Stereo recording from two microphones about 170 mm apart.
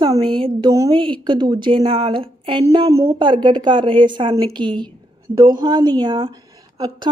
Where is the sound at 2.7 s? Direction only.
20° right (ahead or behind).